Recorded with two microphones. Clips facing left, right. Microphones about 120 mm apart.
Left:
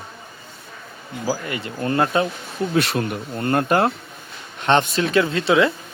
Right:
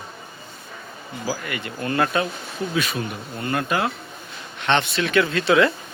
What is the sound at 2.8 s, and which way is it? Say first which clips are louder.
Speech: left 6 dB; 65° left (ahead or behind).